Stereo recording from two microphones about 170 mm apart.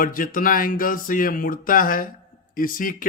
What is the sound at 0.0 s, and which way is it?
Speech, 55° left (ahead or behind).